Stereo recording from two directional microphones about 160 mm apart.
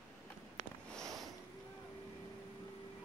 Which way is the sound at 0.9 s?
Centre (ahead or behind).